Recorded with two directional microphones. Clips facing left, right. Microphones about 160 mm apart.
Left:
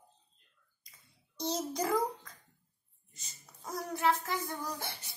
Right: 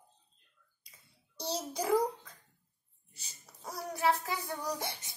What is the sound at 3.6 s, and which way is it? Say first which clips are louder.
Speech: even; 10° right (ahead or behind).